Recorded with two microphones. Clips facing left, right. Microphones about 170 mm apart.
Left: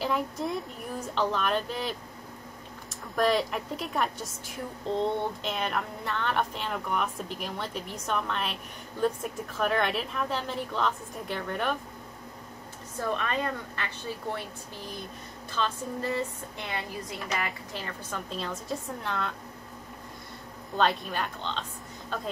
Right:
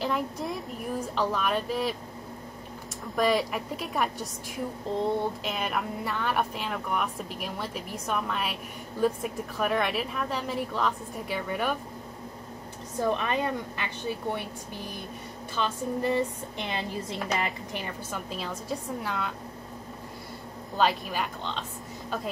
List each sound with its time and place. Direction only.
0.0 s a woman's voice: centre (ahead or behind)
3.2 s a woman's voice: centre (ahead or behind)
13.0 s speech: 15° right (ahead or behind)
15.5 s a woman's voice: 15° right (ahead or behind)
20.7 s a woman's voice: centre (ahead or behind)